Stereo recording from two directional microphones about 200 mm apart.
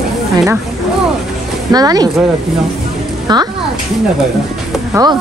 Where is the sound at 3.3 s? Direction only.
20° right (ahead or behind).